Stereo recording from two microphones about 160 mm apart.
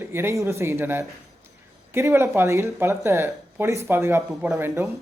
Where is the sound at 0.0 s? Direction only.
15° right (ahead or behind).